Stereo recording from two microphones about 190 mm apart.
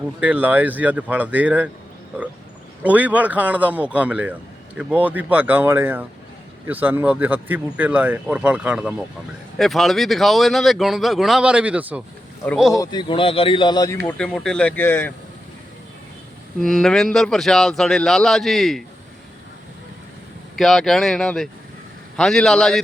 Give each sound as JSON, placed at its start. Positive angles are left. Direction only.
{"t": 0.2, "sound": "speech", "side_deg": -10}
{"t": 2.8, "sound": "a man's voice", "side_deg": -10}
{"t": 12.8, "sound": "speech", "side_deg": 25}
{"t": 14.2, "sound": "speech", "side_deg": 5}
{"t": 16.6, "sound": "a man's voice", "side_deg": 0}
{"t": 20.6, "sound": "a man's voice", "side_deg": 0}